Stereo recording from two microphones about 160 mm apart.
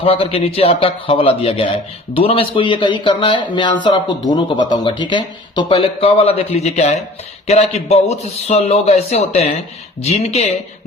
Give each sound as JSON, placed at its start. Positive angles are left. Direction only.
{"t": 0.0, "sound": "speech", "side_deg": 35}